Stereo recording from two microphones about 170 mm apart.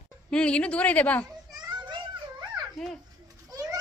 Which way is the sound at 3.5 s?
20° right (ahead or behind).